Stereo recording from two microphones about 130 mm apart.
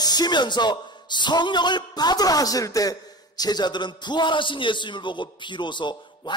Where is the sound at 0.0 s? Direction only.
30° left (ahead or behind).